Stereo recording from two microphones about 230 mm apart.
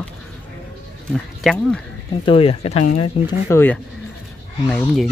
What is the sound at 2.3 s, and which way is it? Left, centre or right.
Speech, left.